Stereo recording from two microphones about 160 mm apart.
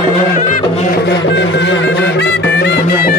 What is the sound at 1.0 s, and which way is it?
Music, 90° left.